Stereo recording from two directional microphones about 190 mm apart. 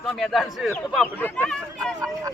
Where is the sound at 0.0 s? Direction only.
Centre (ahead or behind).